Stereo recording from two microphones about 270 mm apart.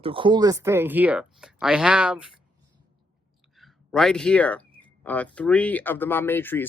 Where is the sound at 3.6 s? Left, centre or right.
Centre.